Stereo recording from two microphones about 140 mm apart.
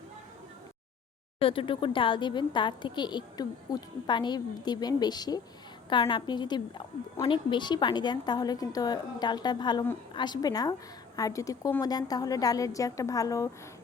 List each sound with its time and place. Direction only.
1.4 s a woman's voice: 40° left (ahead or behind); by 13.5 s 25° left (ahead or behind)